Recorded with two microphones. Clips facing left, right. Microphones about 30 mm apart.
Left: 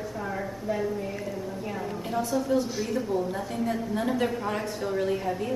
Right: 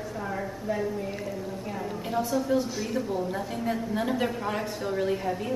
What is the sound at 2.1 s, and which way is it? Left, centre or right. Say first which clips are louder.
A woman's voice: even; centre.